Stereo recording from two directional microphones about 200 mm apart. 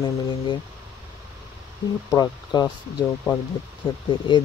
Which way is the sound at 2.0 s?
20° left (ahead or behind).